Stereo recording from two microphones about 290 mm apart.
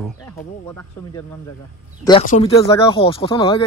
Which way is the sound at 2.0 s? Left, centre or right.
Left.